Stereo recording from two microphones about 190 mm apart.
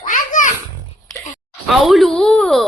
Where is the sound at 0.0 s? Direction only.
45° left (ahead or behind).